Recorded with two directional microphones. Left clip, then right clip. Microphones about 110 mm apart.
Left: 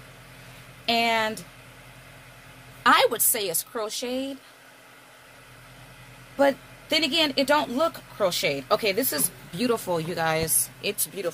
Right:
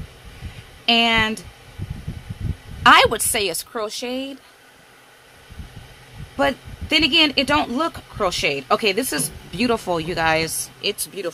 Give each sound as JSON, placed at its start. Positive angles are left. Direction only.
{"t": 0.8, "sound": "speech", "side_deg": -55}
{"t": 2.8, "sound": "a woman's voice", "side_deg": -75}
{"t": 6.3, "sound": "speech", "side_deg": -55}